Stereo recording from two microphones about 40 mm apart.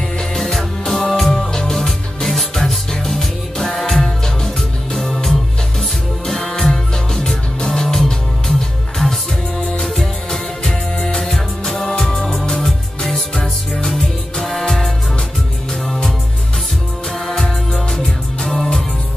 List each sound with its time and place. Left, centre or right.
0.4 s music: centre
10.7 s music: left
11.1 s music: centre
17.3 s music: centre